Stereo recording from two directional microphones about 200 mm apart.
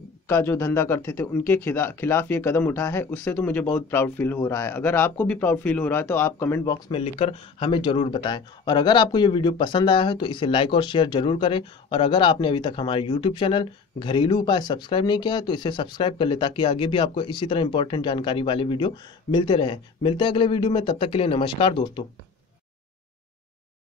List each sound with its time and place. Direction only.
0.3 s speech: 10° left (ahead or behind)
7.0 s speech: 30° left (ahead or behind)